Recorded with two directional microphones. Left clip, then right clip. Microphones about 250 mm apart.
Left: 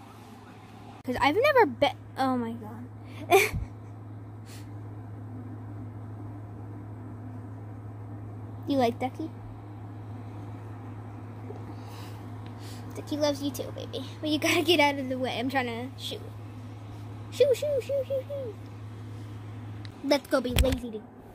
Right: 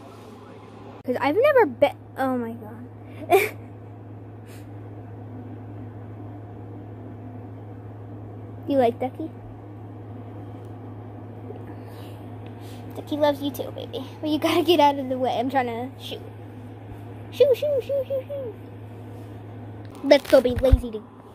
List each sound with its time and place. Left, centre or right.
1.0 s a woman's voice: left
3.2 s a sound: left
8.6 s a woman's voice: left
12.9 s a woman's voice: left
17.4 s a woman's voice: left
20.1 s speech: centre
20.6 s speech: centre